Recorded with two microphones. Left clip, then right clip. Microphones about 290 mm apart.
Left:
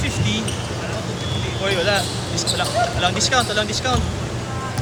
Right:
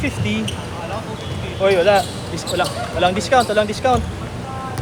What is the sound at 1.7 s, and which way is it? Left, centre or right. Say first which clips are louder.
Speech: right 6 dB; right.